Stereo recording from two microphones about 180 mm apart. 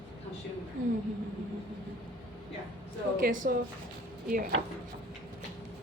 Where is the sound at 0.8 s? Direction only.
90° right.